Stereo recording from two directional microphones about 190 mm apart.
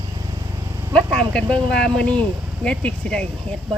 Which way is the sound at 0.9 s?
5° left (ahead or behind).